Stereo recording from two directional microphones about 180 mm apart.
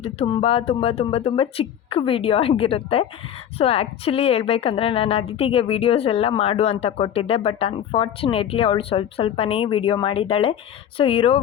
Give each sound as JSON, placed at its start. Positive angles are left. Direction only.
{"t": 0.0, "sound": "a woman's voice", "side_deg": 30}